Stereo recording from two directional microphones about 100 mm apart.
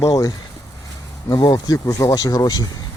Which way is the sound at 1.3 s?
40° left (ahead or behind).